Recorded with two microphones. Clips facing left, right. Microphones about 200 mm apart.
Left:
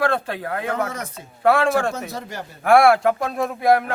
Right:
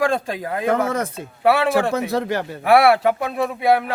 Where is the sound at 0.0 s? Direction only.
10° right (ahead or behind).